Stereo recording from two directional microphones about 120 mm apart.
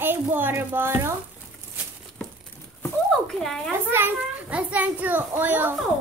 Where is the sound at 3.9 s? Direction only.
15° right (ahead or behind).